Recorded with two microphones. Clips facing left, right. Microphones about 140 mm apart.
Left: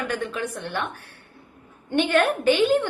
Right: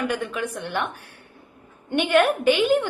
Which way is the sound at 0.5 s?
15° right (ahead or behind).